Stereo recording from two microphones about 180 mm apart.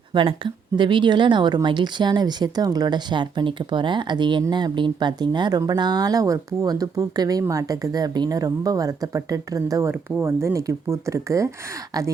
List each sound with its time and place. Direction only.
0.1 s speech: 25° right (ahead or behind)